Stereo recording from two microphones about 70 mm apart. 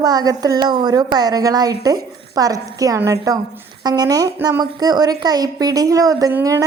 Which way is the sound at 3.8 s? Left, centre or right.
Right.